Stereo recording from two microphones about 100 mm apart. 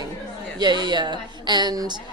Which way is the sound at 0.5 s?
45° right (ahead or behind).